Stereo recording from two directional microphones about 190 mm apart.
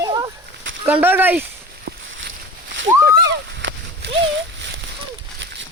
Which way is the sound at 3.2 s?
65° right (ahead or behind).